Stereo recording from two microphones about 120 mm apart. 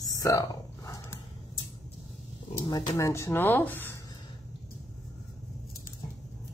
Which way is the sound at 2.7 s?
30° left (ahead or behind).